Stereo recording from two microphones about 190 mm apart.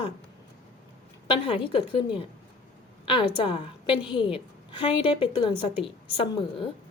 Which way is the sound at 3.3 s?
30° left (ahead or behind).